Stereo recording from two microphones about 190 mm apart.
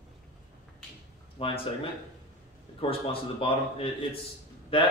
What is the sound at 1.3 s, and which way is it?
A man's voice, 30° left (ahead or behind).